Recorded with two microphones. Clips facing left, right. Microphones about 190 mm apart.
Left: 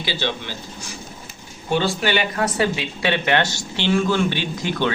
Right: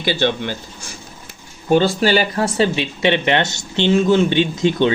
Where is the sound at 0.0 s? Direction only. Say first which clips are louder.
Right 7 dB; 55° right (ahead or behind).